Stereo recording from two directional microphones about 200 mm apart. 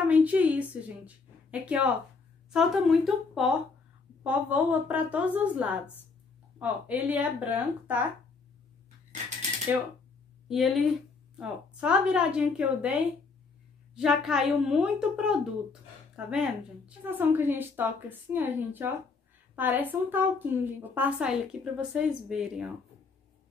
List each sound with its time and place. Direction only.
0.1 s a woman's voice: 5° right (ahead or behind)
10.5 s speech: centre (ahead or behind)
13.9 s a woman's voice: centre (ahead or behind)